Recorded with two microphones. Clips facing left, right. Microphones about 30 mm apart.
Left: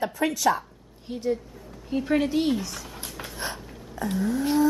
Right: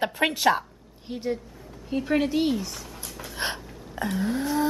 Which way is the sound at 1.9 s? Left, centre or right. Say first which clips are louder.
Even; centre.